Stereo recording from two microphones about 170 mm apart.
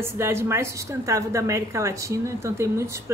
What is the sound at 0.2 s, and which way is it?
A woman's voice, 15° right (ahead or behind).